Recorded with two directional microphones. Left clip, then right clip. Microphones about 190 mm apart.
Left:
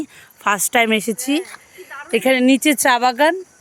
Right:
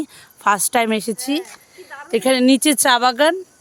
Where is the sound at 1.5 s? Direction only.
10° left (ahead or behind).